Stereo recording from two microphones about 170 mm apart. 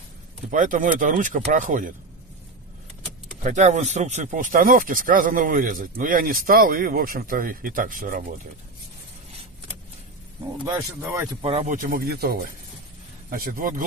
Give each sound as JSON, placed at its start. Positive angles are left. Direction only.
{"t": 0.5, "sound": "speech", "side_deg": -50}
{"t": 3.4, "sound": "speech", "side_deg": -45}
{"t": 11.0, "sound": "speech", "side_deg": -15}
{"t": 11.6, "sound": "speech", "side_deg": -50}